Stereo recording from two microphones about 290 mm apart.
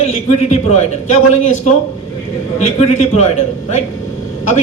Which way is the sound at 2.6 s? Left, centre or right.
Left.